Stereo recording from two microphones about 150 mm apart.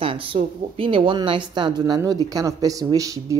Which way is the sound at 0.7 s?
35° right (ahead or behind).